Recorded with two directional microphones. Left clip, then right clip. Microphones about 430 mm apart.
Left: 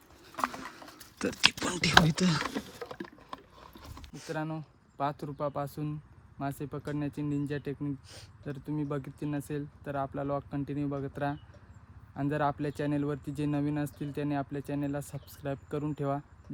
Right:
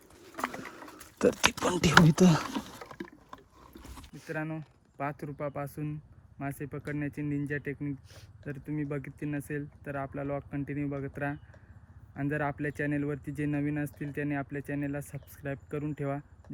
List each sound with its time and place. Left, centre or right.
1.2 s speech: centre
2.9 s mechanisms: centre
4.3 s speech: centre